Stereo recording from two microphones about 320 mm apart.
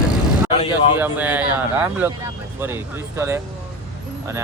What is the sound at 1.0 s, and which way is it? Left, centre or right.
Speech, centre.